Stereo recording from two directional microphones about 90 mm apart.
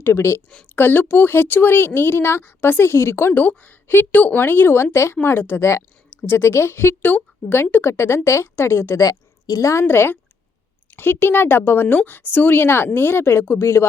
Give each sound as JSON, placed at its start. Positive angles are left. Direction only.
{"t": 0.0, "sound": "speech", "side_deg": 30}
{"t": 9.8, "sound": "speech", "side_deg": 25}